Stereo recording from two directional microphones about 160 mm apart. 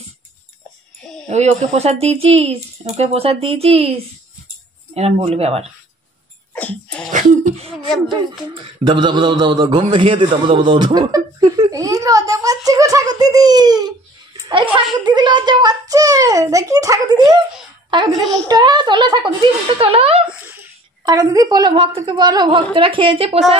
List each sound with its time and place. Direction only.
1.3 s speech: 45° right (ahead or behind)
6.5 s sneeze: 10° left (ahead or behind)
7.1 s a sound: 50° right (ahead or behind)
8.8 s a man's voice: 30° right (ahead or behind)
20.2 s a sound: 10° right (ahead or behind)
21.0 s a child's voice: 20° right (ahead or behind)